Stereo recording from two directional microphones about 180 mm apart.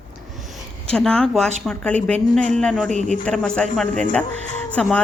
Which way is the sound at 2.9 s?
40° right (ahead or behind).